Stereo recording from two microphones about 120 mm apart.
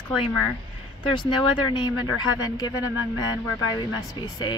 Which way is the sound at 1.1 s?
40° left (ahead or behind).